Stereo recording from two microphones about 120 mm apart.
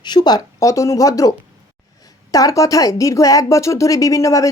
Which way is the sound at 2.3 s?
30° left (ahead or behind).